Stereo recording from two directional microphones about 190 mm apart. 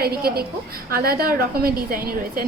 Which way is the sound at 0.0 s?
55° right (ahead or behind).